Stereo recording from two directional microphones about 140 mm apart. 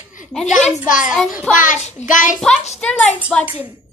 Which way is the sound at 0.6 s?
65° left (ahead or behind).